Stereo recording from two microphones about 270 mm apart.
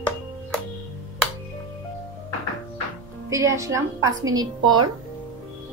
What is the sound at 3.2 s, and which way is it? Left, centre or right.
A woman's voice, centre.